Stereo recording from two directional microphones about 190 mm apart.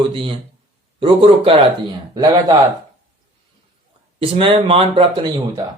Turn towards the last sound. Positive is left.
turn(degrees=-25)  # may be behind; listen again after turning